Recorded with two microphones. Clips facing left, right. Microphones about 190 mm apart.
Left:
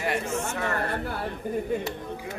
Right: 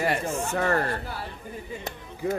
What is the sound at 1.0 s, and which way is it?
Speech, 55° left (ahead or behind).